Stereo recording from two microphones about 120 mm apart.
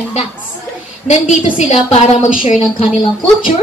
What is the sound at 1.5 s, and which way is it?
Speech, 80° left.